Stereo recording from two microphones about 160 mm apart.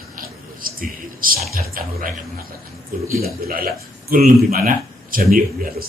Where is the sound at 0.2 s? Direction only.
60° right (ahead or behind).